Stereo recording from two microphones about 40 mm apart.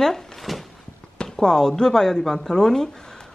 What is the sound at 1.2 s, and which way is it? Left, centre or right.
Speech, centre.